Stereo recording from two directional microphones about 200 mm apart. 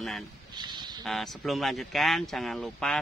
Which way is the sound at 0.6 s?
20° right (ahead or behind).